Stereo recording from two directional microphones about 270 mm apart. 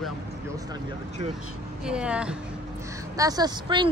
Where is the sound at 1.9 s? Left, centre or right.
Centre.